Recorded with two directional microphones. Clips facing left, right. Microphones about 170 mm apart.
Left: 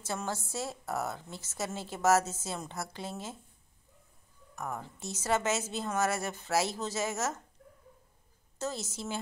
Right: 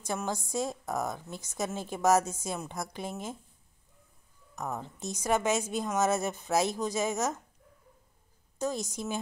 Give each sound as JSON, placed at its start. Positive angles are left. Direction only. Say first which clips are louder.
{"t": 0.0, "sound": "a woman's voice", "louder": "right 2 dB", "side_deg": -15}
{"t": 4.6, "sound": "a woman's voice", "louder": "right 2 dB", "side_deg": -20}
{"t": 8.5, "sound": "a woman's voice", "louder": "right 4 dB", "side_deg": -15}